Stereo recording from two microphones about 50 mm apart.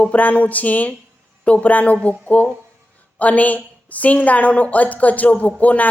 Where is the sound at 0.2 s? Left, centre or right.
Left.